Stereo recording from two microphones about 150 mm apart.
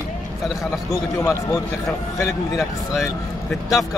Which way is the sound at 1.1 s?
20° left (ahead or behind).